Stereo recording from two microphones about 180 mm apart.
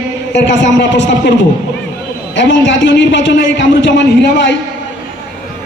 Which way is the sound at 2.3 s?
90° left.